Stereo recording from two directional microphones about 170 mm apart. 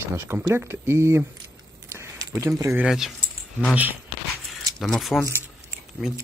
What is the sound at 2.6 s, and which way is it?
Speech, 15° right (ahead or behind).